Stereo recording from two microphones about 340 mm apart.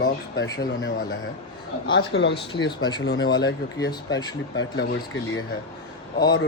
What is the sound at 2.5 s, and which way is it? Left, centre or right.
Speech, centre.